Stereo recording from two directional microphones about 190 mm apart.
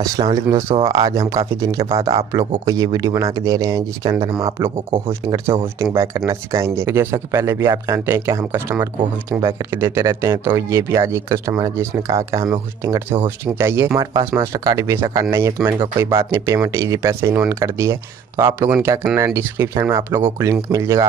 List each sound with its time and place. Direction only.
0.0 s speech: 20° right (ahead or behind)